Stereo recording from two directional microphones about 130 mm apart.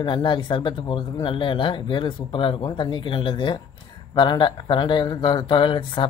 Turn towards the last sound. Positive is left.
turn(degrees=40)  # may be behind; listen again after turning